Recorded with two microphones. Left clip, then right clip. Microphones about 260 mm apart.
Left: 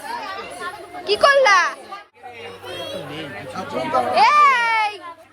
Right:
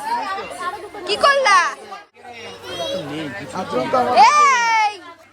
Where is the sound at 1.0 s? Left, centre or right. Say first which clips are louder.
Left 1 dB; centre.